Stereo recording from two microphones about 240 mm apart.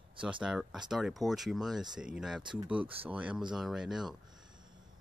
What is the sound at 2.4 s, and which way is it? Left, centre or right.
Speech, centre.